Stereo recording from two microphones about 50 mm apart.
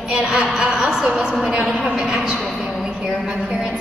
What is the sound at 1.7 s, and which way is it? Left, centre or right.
Speech, centre.